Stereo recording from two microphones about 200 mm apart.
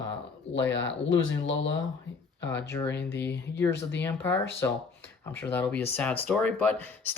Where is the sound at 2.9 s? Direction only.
60° left (ahead or behind).